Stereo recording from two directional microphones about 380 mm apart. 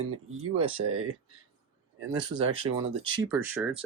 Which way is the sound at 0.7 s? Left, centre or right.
Right.